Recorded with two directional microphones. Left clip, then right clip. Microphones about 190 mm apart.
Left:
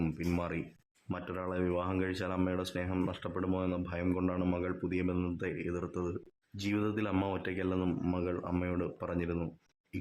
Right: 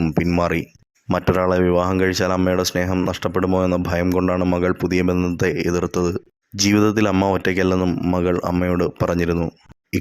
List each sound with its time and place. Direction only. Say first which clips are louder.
0.0 s speech: right 16 dB; 30° right (ahead or behind)